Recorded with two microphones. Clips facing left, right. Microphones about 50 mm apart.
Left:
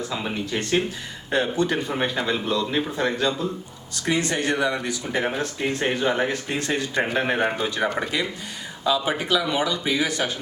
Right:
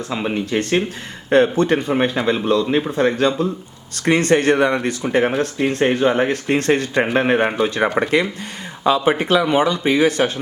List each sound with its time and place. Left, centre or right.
0.1 s speech: right
6.3 s speech: right
7.0 s speech: right